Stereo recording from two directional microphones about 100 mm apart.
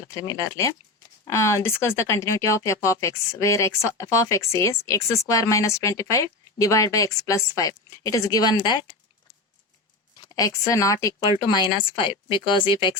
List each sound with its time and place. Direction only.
0.1 s speech: 35° left (ahead or behind)
10.2 s a woman's voice: 35° left (ahead or behind); by 12.9 s 50° left (ahead or behind)